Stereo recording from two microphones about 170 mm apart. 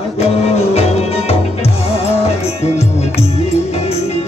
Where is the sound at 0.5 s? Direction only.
35° left (ahead or behind).